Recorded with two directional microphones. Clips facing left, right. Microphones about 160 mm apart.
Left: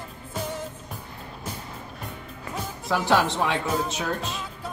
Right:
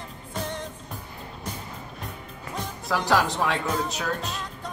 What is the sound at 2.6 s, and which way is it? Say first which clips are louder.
Music: left 1 dB; 5° left (ahead or behind).